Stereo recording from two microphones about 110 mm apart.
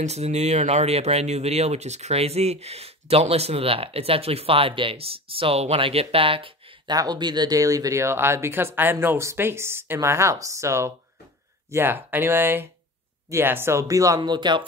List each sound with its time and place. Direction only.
0.0 s speech: 80° right; by 6.5 s 55° right (ahead or behind)
6.9 s speech: 40° right (ahead or behind)